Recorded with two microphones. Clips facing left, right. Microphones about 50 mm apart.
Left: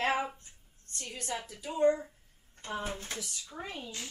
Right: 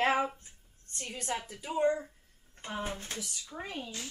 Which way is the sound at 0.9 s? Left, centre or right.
Right.